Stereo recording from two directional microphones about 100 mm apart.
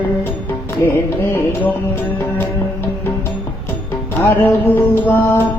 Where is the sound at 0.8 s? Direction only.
20° left (ahead or behind).